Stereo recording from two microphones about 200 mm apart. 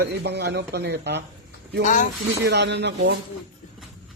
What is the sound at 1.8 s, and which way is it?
Speech, 40° left (ahead or behind).